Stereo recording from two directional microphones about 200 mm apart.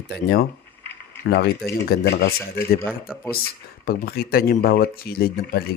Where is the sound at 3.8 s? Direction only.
50° left (ahead or behind).